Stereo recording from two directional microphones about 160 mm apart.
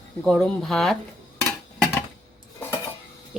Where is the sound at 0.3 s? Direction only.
Centre (ahead or behind).